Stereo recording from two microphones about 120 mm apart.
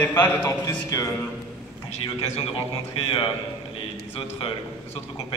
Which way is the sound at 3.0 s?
50° left (ahead or behind).